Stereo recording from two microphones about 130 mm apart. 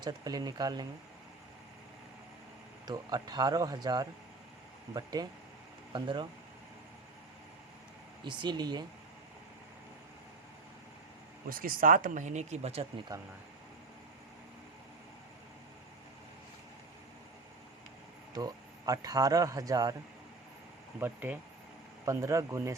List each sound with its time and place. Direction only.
0.0 s speech: 30° right (ahead or behind)
2.8 s speech: 35° right (ahead or behind)
8.2 s speech: 35° right (ahead or behind)
11.4 s speech: 90° right; by 12.9 s 50° right (ahead or behind)
18.3 s speech: 30° right (ahead or behind)
21.0 s speech: 15° right (ahead or behind)
22.0 s speech: 25° right (ahead or behind)